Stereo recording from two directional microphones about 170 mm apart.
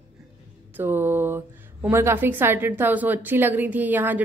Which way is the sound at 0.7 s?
10° right (ahead or behind).